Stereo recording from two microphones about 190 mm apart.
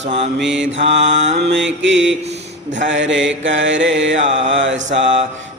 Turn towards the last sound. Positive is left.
turn(degrees=-75)  # may be behind; listen again after turning